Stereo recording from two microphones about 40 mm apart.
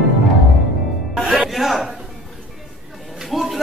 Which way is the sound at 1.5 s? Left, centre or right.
Centre.